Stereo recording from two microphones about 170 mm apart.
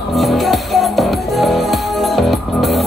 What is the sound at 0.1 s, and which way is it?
Music, centre (ahead or behind).